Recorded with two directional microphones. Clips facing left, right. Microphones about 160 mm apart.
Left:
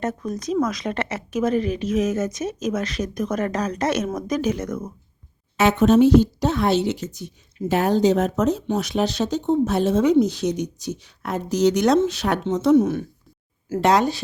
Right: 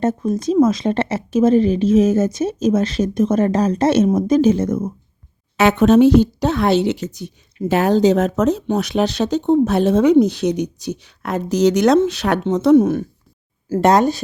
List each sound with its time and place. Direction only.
0.0 s speech: 25° right (ahead or behind)
5.5 s speech: 70° right (ahead or behind)
7.7 s speech: 90° right
8.6 s speech: 65° right (ahead or behind); by 14.2 s 50° right (ahead or behind)